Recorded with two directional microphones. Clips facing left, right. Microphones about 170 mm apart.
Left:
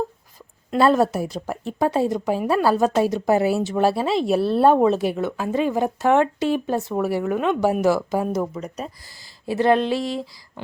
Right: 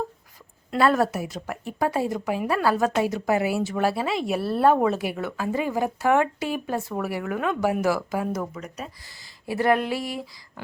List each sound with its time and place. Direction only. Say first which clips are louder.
0.7 s speech: left 4 dB; 25° left (ahead or behind)
4.4 s speech: left 6 dB; 5° right (ahead or behind)
4.6 s speech: left 3 dB; 25° left (ahead or behind)